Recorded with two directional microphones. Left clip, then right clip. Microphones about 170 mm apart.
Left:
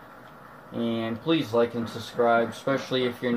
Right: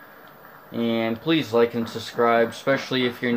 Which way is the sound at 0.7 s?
55° right (ahead or behind).